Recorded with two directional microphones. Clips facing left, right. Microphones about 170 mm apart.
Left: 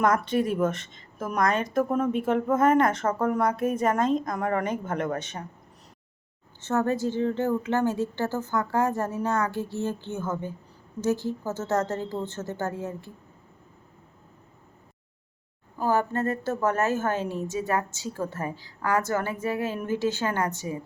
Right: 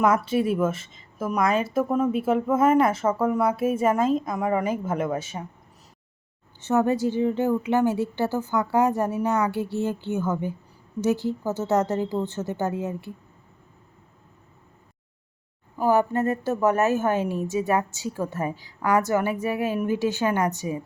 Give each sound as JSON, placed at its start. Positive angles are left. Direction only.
{"t": 0.0, "sound": "a woman's voice", "side_deg": -5}
{"t": 6.6, "sound": "a woman's voice", "side_deg": -15}
{"t": 15.8, "sound": "a woman's voice", "side_deg": -15}